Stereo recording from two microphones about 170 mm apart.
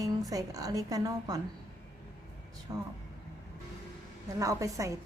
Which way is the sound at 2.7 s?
20° right (ahead or behind).